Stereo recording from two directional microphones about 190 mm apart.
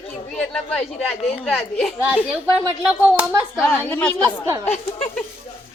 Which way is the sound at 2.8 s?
5° right (ahead or behind).